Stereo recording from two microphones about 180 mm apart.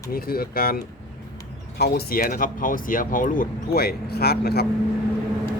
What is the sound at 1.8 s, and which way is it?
Speech, 60° left (ahead or behind).